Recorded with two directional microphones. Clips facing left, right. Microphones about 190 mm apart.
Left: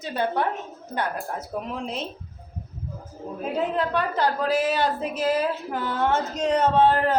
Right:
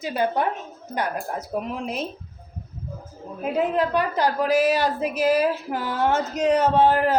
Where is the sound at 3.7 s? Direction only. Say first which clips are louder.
Right 3 dB; 10° right (ahead or behind).